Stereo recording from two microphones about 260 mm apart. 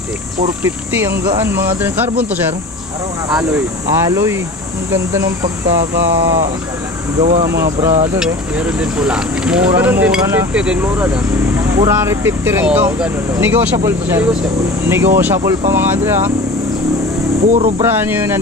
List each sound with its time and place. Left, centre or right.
0.7 s speech: centre
3.3 s speech: centre
7.2 s speech: centre
17.5 s speech: right
17.8 s speech: centre